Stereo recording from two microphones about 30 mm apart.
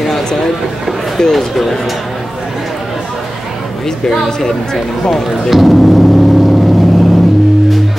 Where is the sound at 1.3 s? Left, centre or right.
Centre.